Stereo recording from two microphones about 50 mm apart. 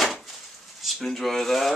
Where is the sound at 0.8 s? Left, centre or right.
Centre.